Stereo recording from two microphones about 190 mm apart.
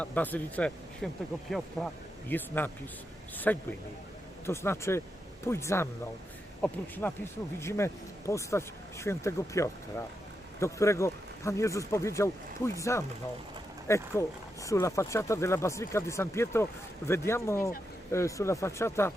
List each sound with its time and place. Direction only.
0.0 s speech: 10° left (ahead or behind)